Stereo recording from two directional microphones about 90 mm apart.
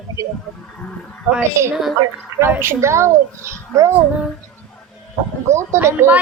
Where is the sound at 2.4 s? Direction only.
25° right (ahead or behind).